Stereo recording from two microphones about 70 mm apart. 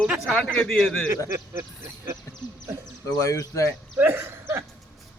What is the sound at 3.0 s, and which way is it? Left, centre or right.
Speech, left.